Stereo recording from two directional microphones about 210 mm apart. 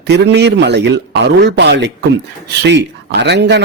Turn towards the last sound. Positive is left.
turn(degrees=-55)  # may be behind; listen again after turning